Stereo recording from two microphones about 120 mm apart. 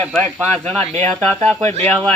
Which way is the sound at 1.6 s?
65° right (ahead or behind).